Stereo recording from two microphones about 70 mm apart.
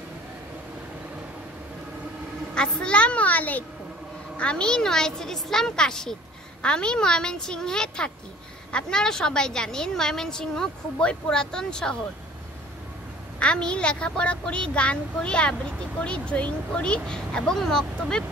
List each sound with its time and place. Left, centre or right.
2.5 s a woman's voice: centre
13.4 s a woman's voice: centre